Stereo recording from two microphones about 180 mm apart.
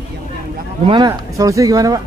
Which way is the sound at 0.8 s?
25° right (ahead or behind).